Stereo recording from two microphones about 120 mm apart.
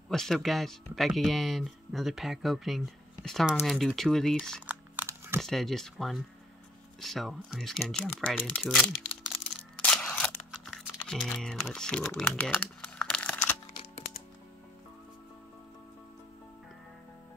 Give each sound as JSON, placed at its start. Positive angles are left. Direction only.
{"t": 0.1, "sound": "speech", "side_deg": 0}
{"t": 4.6, "sound": "a sound", "side_deg": -15}
{"t": 5.4, "sound": "speech", "side_deg": 0}
{"t": 10.0, "sound": "computer keyboard", "side_deg": 5}